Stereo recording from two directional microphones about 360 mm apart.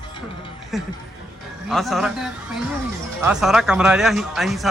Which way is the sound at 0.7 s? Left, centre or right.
Centre.